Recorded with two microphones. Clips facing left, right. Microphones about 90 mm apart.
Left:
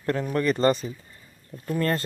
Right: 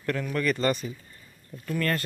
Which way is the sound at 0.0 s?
30° left (ahead or behind).